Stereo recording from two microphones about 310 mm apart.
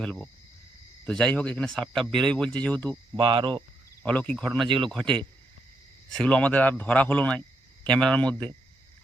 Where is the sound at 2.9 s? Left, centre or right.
Centre.